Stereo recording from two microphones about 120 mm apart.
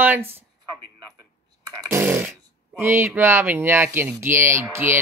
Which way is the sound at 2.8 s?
20° right (ahead or behind).